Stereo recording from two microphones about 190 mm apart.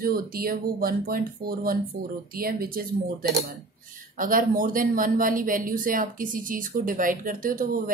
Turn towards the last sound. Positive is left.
turn(degrees=-45)  # may be behind; listen again after turning